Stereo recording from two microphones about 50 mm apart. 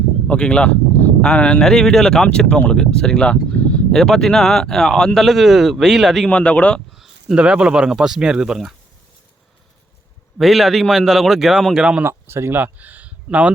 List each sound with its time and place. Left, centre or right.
0.3 s speech: left
1.6 s speech: centre
3.5 s a sound: left
3.9 s speech: centre
5.2 s a man's voice: centre
6.2 s speech: left
6.9 s a sound: centre
7.3 s speech: centre
10.3 s a man's voice: centre
12.0 s speech: right
12.5 s speech: right